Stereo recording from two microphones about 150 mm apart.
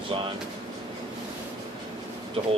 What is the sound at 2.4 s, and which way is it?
Speech, 40° right (ahead or behind).